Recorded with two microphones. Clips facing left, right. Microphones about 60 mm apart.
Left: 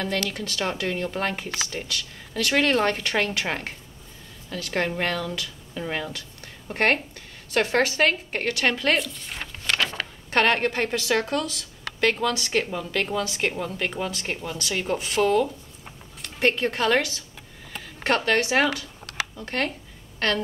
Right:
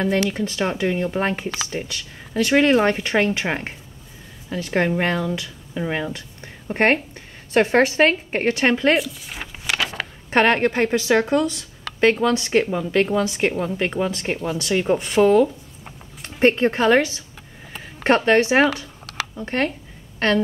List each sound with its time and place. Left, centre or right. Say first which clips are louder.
0.0 s a woman's voice: right 7 dB; right
8.9 s a sound: right 4 dB; centre
10.6 s a woman's voice: right 6 dB; centre